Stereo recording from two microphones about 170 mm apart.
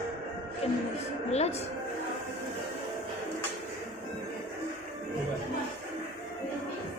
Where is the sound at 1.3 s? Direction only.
40° left (ahead or behind).